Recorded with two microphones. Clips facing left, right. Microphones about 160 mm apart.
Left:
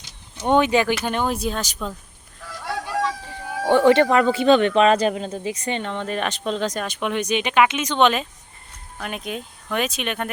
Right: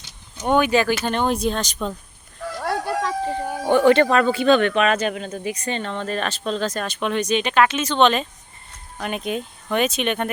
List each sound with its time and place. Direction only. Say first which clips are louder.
0.4 s speech: even; 25° left (ahead or behind)
1.0 s speech: right 2 dB; 10° left (ahead or behind)
2.6 s a sound: right 2 dB; 60° right (ahead or behind)
4.1 s speech: left 1 dB; 20° left (ahead or behind); by 10.3 s centre (ahead or behind)